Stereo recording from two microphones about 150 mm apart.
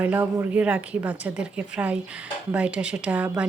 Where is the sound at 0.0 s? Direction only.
15° right (ahead or behind).